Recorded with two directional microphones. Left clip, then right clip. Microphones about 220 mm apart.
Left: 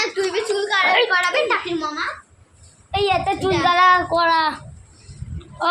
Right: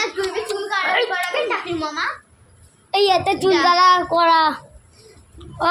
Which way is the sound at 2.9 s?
25° right (ahead or behind).